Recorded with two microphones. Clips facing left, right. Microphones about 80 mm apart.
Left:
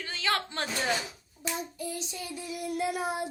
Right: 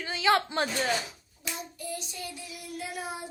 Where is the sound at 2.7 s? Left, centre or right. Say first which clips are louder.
Left 6 dB; left.